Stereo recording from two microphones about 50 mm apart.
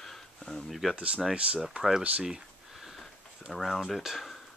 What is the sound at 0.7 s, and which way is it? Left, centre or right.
Speech, centre.